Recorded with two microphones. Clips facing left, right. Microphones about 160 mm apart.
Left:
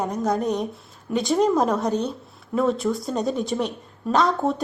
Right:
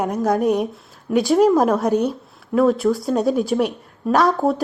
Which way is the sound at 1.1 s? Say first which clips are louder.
Right 5 dB; 5° right (ahead or behind).